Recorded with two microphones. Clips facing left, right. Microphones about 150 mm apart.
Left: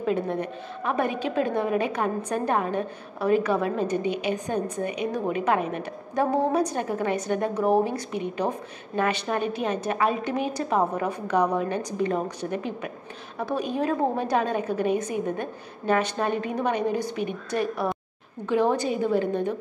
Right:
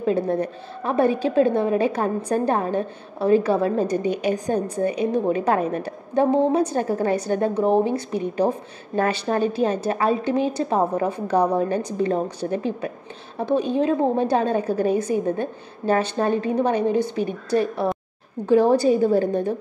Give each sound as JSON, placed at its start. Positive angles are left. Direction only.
{"t": 0.0, "sound": "a woman's voice", "side_deg": -35}